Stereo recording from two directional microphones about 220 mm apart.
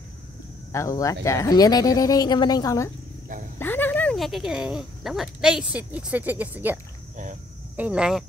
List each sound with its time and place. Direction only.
0.7 s speech: 15° left (ahead or behind); by 8.2 s 5° right (ahead or behind)